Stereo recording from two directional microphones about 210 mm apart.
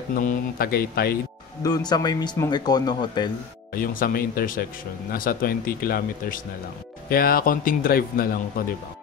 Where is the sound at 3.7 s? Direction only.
45° left (ahead or behind).